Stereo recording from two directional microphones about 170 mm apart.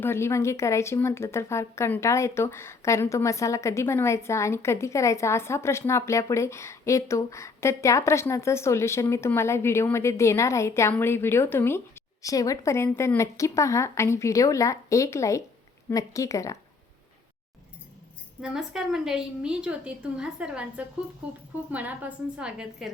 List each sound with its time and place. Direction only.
0.0 s speech: 15° left (ahead or behind)
18.4 s a woman's voice: 5° right (ahead or behind)